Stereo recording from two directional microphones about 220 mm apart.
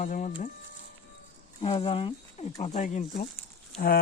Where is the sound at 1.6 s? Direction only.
25° left (ahead or behind); by 4.0 s 40° left (ahead or behind).